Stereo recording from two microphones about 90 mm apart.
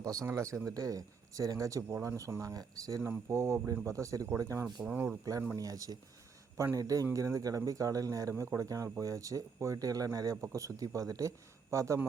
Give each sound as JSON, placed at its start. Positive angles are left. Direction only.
{"t": 0.0, "sound": "a man's voice", "side_deg": -40}
{"t": 3.1, "sound": "a man's voice", "side_deg": -25}
{"t": 4.6, "sound": "speech", "side_deg": -10}
{"t": 5.5, "sound": "a man's voice", "side_deg": -40}